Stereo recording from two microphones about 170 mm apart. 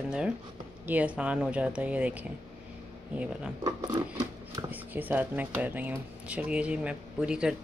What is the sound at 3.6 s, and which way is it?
Scissors, 25° right (ahead or behind).